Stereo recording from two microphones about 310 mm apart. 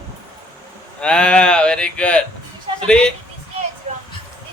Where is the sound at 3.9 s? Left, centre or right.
Right.